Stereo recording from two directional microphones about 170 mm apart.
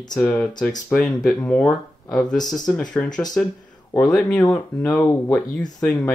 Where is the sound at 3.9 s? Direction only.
5° left (ahead or behind).